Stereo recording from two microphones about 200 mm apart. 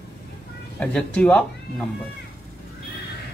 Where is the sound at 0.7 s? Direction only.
5° left (ahead or behind).